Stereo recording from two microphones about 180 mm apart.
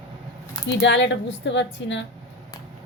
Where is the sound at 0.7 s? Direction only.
85° left.